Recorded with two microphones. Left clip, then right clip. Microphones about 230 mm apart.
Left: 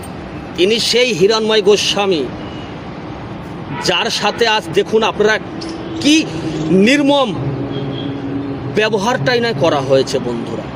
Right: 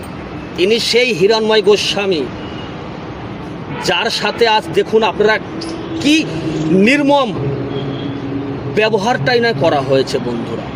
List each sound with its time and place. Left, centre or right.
0.5 s a man's voice: centre
3.8 s a man's voice: centre
8.7 s a man's voice: centre